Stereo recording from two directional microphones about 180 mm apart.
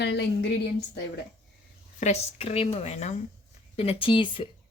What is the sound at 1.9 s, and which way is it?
Speech, 40° left (ahead or behind).